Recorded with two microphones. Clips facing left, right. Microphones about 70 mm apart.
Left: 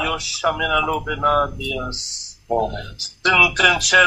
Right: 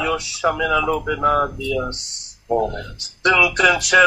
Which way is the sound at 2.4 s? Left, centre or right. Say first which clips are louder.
Right 1 dB; centre.